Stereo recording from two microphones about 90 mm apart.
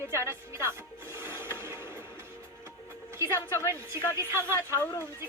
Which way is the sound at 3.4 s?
25° left (ahead or behind).